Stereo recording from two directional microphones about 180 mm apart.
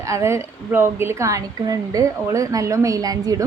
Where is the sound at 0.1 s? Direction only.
15° right (ahead or behind).